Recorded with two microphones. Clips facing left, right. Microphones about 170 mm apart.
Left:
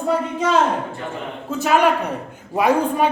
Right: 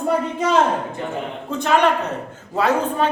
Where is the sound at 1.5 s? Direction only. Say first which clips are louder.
Left 1 dB; 5° left (ahead or behind).